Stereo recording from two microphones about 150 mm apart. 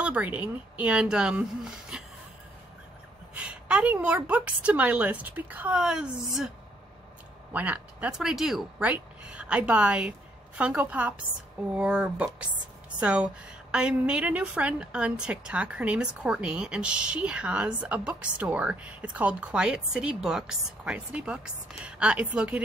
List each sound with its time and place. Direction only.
0.0 s a woman's voice: 10° right (ahead or behind)
3.3 s a woman's voice: 10° right (ahead or behind)
7.5 s a woman's voice: 10° right (ahead or behind)